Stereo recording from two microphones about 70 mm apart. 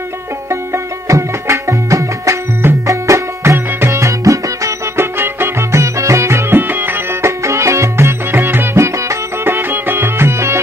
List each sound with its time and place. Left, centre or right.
1.0 s music: right
4.9 s music: right
6.7 s music: right